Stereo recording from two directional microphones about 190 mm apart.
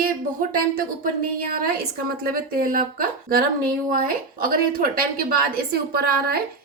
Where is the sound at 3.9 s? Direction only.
50° right (ahead or behind).